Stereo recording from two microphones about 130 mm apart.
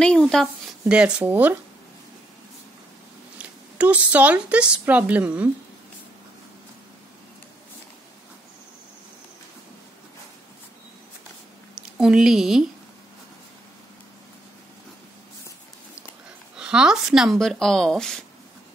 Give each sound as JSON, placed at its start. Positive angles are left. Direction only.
{"t": 0.0, "sound": "speech", "side_deg": 5}
{"t": 0.8, "sound": "a woman's voice", "side_deg": -5}
{"t": 3.7, "sound": "a woman's voice", "side_deg": -10}
{"t": 11.7, "sound": "speech", "side_deg": -5}
{"t": 16.5, "sound": "speech", "side_deg": -5}